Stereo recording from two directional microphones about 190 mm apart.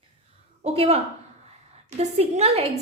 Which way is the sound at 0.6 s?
35° right (ahead or behind).